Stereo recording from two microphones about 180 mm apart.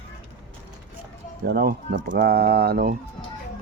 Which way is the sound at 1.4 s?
60° right (ahead or behind).